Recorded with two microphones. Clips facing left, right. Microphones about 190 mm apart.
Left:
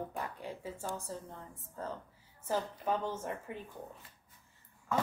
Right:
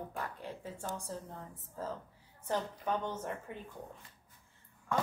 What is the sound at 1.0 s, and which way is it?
A woman's voice, centre (ahead or behind).